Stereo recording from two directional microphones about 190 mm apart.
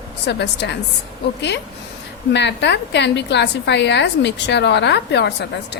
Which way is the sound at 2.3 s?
65° left (ahead or behind).